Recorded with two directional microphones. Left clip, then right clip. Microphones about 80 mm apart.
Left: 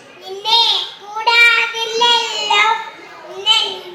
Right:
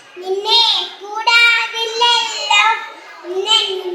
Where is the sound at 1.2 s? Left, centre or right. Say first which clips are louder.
Left 1 dB; left.